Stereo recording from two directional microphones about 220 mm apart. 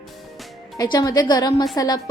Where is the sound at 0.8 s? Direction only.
15° left (ahead or behind).